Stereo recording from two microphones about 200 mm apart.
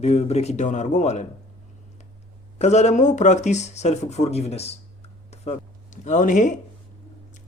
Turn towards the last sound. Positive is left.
turn(degrees=40)  # may be behind; listen again after turning